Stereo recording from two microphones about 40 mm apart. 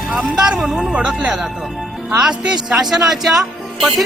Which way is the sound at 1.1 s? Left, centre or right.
Right.